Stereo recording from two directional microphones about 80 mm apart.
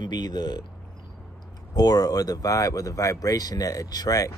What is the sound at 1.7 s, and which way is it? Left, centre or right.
Speech, left.